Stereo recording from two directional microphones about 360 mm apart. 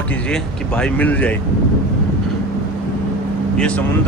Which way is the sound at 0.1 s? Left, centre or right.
Centre.